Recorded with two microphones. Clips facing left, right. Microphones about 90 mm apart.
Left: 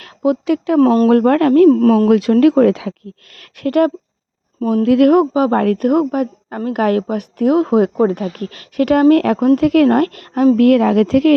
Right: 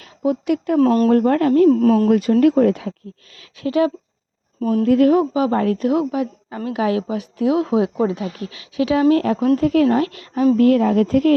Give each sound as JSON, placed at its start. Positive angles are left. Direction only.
{"t": 0.0, "sound": "speech", "side_deg": 80}
{"t": 0.8, "sound": "speech", "side_deg": 40}
{"t": 1.0, "sound": "speech", "side_deg": 65}
{"t": 1.7, "sound": "a woman's voice", "side_deg": 50}
{"t": 2.0, "sound": "speech", "side_deg": 90}
{"t": 3.3, "sound": "speech", "side_deg": 60}
{"t": 4.8, "sound": "speech", "side_deg": 80}
{"t": 5.3, "sound": "a woman's voice", "side_deg": 45}
{"t": 10.6, "sound": "speech", "side_deg": 75}